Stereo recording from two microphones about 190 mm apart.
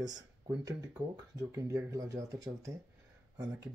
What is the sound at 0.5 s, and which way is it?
Speech, 20° right (ahead or behind).